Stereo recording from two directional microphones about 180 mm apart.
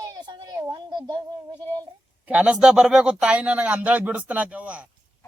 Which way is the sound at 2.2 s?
5° right (ahead or behind).